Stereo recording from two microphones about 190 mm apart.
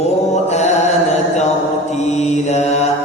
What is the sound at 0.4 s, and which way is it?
Mantra, 35° left (ahead or behind).